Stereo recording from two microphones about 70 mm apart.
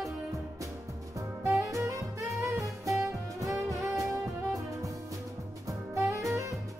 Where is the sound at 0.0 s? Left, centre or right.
Right.